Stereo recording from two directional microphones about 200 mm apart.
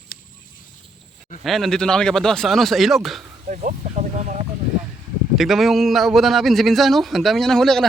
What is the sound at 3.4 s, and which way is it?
Speech, 35° right (ahead or behind).